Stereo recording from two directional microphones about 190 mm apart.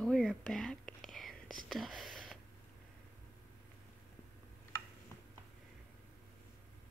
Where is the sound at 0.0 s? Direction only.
Centre (ahead or behind).